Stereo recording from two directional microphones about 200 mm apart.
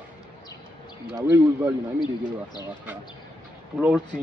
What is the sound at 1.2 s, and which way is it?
Speech, 10° right (ahead or behind).